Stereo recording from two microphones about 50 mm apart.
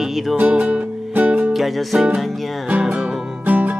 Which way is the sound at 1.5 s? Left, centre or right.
Centre.